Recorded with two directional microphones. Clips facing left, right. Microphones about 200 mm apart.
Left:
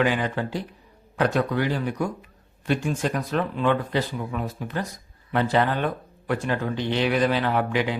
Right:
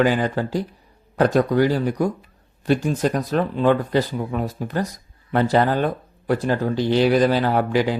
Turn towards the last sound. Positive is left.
turn(degrees=-35)  # may be behind; listen again after turning